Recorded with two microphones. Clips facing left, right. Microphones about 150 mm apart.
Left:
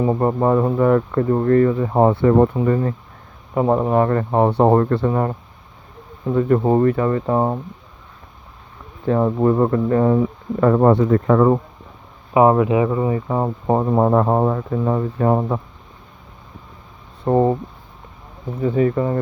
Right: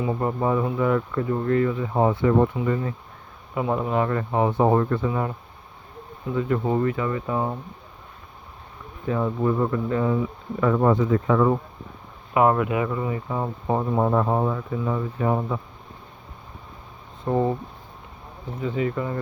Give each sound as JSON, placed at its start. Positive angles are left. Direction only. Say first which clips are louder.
{"t": 0.0, "sound": "speech", "louder": "left 7 dB", "side_deg": 45}
{"t": 0.3, "sound": "speech", "louder": "left 6 dB", "side_deg": 55}
{"t": 9.0, "sound": "speech", "louder": "left 7 dB", "side_deg": 50}
{"t": 12.3, "sound": "speech", "louder": "left 6 dB", "side_deg": 25}
{"t": 13.2, "sound": "speech", "louder": "left 6 dB", "side_deg": 50}
{"t": 17.2, "sound": "speech", "louder": "left 6 dB", "side_deg": 50}
{"t": 18.6, "sound": "speech", "louder": "left 8 dB", "side_deg": 40}